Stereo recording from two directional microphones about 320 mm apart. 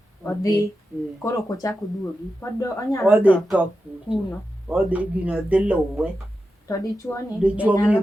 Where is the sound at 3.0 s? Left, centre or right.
Centre.